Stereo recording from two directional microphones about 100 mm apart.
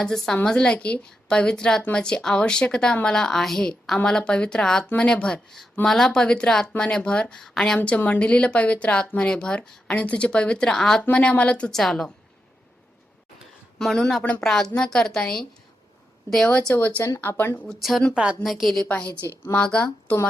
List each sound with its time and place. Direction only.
0.0 s a woman's voice: 5° left (ahead or behind)
7.8 s a woman's voice: 15° left (ahead or behind)
13.7 s a woman's voice: centre (ahead or behind); by 17.7 s 20° left (ahead or behind)
17.7 s speech: centre (ahead or behind)
18.1 s a woman's voice: 10° right (ahead or behind)
18.4 s speech: centre (ahead or behind)
18.9 s a woman's voice: 10° left (ahead or behind)